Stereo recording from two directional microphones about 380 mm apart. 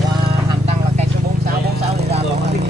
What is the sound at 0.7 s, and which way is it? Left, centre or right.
Clip-clop, centre.